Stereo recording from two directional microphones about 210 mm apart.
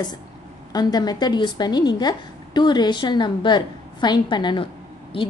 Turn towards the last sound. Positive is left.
turn(degrees=25)  # may be behind; listen again after turning